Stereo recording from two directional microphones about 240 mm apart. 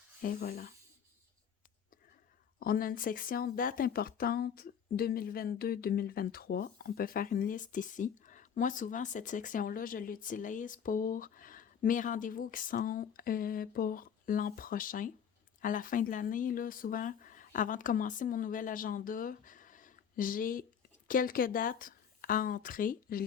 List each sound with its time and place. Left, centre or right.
0.2 s speech: left
2.6 s speech: left